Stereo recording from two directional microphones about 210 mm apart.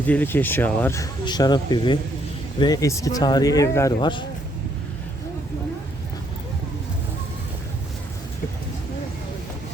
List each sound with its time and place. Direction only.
0.1 s speech: 10° left (ahead or behind)